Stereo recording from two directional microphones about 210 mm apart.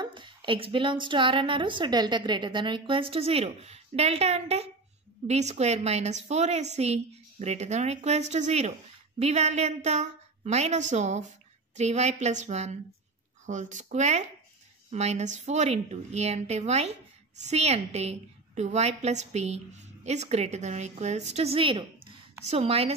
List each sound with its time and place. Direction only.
0.0 s a woman's voice: 25° right (ahead or behind)